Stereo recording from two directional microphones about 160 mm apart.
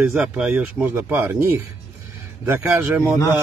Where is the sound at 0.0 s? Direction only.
10° right (ahead or behind).